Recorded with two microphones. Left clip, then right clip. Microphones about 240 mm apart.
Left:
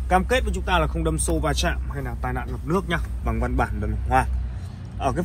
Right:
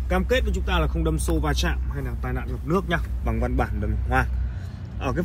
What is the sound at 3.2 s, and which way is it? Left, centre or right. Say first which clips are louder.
Speech: left 3 dB; left.